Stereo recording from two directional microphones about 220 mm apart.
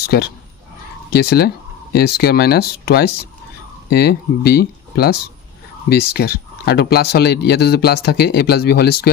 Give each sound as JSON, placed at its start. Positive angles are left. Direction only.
{"t": 0.0, "sound": "speech", "side_deg": 45}